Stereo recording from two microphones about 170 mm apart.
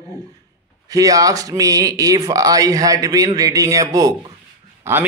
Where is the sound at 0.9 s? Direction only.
20° right (ahead or behind).